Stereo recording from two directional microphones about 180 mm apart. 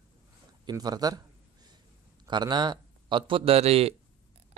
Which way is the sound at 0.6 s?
20° right (ahead or behind).